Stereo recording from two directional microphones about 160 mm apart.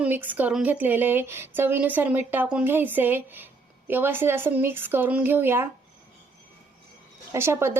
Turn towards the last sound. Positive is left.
turn(degrees=-15)  # may be behind; listen again after turning